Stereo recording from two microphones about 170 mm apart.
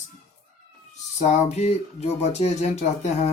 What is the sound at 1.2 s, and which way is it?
Speech, 40° left (ahead or behind).